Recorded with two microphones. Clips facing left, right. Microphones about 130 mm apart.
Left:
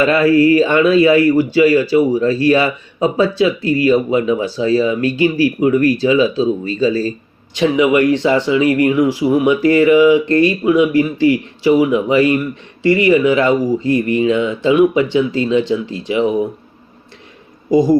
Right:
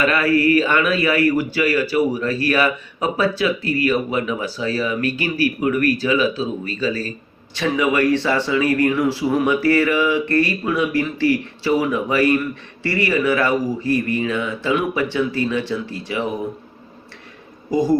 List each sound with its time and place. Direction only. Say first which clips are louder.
0.0 s speech: left 6 dB; 30° left (ahead or behind)
17.7 s speech: left 6 dB; 15° left (ahead or behind)